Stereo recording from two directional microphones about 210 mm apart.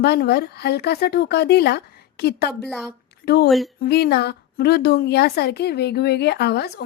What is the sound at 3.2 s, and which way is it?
Speech, 50° left (ahead or behind).